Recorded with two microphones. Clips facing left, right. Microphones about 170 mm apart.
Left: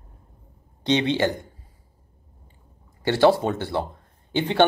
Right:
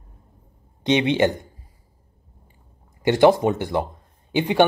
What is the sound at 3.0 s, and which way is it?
Speech, 15° right (ahead or behind).